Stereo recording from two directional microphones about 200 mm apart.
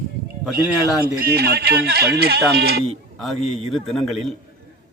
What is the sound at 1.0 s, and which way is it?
Speech, 50° right (ahead or behind).